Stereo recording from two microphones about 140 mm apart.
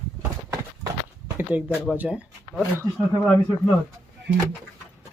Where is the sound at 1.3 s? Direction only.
15° right (ahead or behind).